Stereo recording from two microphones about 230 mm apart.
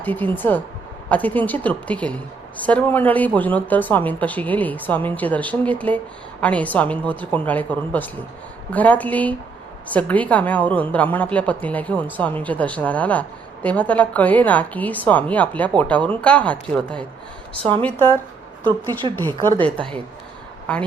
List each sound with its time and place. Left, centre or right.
0.0 s a woman's voice: centre
19.1 s a woman's voice: centre